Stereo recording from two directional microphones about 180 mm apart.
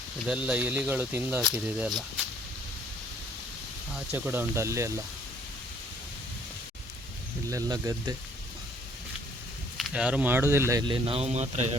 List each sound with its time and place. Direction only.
0.3 s speech: 5° right (ahead or behind)
3.9 s speech: 10° right (ahead or behind)
7.5 s speech: 20° right (ahead or behind)
9.7 s speech: 5° right (ahead or behind); by 11.8 s 40° right (ahead or behind)